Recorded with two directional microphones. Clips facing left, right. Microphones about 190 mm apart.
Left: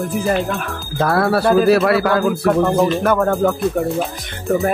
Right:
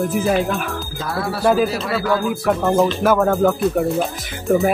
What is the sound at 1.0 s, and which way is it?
Speech, 60° left (ahead or behind).